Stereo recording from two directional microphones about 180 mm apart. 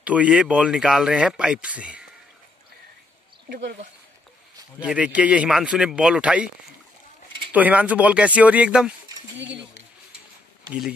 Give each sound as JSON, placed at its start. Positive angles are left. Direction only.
{"t": 0.0, "sound": "speech", "side_deg": -5}
{"t": 3.4, "sound": "speech", "side_deg": -55}
{"t": 4.7, "sound": "speech", "side_deg": -5}
{"t": 7.5, "sound": "speech", "side_deg": -10}